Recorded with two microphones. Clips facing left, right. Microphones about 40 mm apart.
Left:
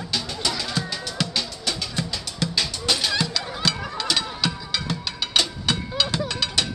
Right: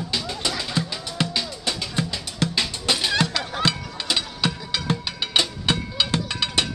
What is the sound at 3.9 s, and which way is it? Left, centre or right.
Music, right.